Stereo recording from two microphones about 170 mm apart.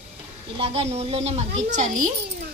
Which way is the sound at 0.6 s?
35° right (ahead or behind).